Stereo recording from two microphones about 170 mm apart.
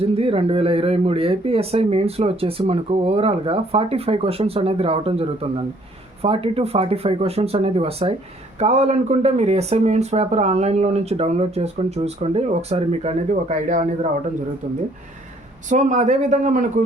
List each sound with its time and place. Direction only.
0.0 s speech: 35° right (ahead or behind)